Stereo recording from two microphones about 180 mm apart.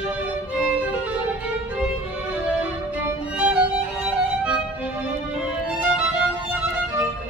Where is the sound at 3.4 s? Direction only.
5° right (ahead or behind).